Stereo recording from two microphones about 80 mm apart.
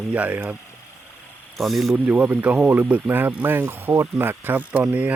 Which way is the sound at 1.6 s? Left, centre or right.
Centre.